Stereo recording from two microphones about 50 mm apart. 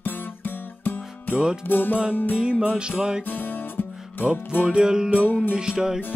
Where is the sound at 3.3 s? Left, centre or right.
Left.